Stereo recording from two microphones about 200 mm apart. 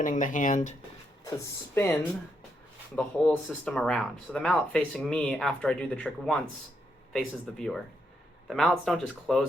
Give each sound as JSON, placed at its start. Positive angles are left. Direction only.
{"t": 0.0, "sound": "speech", "side_deg": 40}
{"t": 1.2, "sound": "speech", "side_deg": 15}